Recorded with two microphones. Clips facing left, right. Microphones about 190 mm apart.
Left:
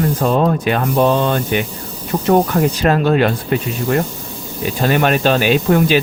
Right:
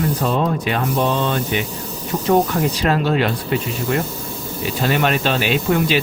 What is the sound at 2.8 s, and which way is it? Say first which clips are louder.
Speech: left 4 dB; 50° left (ahead or behind).